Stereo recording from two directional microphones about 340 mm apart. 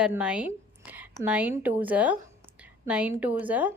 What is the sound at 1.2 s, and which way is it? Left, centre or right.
A woman's voice, centre.